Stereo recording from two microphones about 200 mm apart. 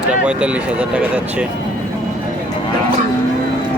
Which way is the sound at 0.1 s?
5° right (ahead or behind).